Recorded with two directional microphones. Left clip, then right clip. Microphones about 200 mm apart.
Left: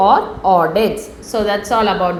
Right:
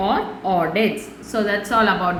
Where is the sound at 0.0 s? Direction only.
15° left (ahead or behind).